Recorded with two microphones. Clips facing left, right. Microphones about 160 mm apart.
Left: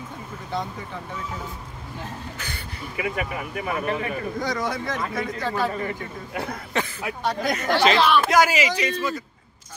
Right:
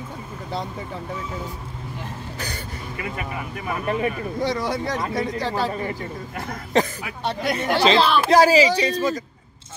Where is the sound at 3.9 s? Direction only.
30° right (ahead or behind).